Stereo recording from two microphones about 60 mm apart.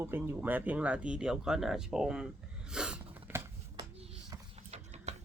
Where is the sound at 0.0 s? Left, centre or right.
Right.